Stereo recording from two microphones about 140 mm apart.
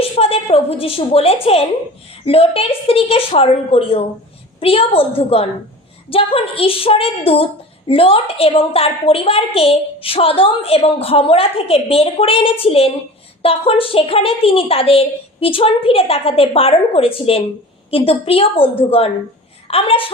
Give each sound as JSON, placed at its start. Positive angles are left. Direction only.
{"t": 0.0, "sound": "a woman's voice", "side_deg": 45}